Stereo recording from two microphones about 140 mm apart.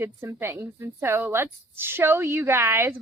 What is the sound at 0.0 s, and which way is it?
A woman's voice, 20° right (ahead or behind).